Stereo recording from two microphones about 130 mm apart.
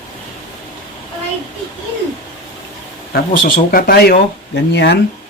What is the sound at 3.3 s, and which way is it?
Speech, 90° left.